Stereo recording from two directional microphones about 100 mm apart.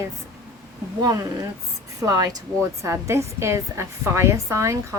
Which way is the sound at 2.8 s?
30° right (ahead or behind).